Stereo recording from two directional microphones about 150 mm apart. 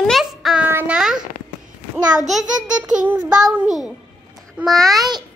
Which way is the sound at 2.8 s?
5° right (ahead or behind).